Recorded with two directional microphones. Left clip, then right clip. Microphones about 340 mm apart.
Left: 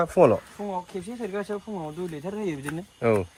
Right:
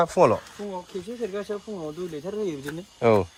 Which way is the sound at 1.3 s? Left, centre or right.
Left.